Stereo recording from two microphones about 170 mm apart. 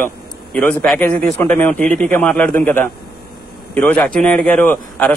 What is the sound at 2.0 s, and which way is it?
Speech, 5° left (ahead or behind).